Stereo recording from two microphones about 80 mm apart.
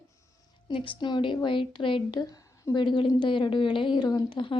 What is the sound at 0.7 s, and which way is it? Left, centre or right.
A woman's voice, left.